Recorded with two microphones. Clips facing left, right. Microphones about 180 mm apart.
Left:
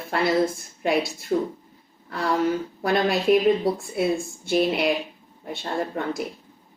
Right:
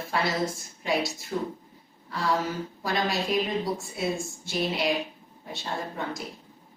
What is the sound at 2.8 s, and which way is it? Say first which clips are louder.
Speech: left 5 dB; 60° left (ahead or behind).